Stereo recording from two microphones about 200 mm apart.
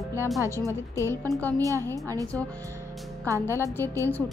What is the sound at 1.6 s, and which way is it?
Speech, 15° right (ahead or behind).